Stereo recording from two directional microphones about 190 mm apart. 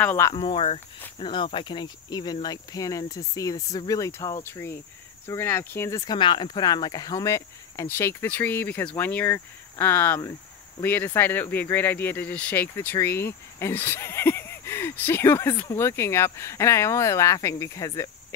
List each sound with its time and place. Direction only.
0.0 s speech: 10° left (ahead or behind)
0.3 s cricket: 30° left (ahead or behind); by 4.7 s 15° left (ahead or behind)
5.2 s speech: 15° left (ahead or behind)